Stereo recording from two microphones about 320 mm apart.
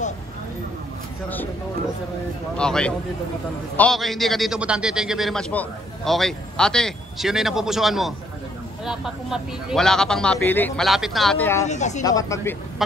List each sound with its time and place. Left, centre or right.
2.5 s a man's voice: centre
11.6 s speech: left
12.0 s speech: centre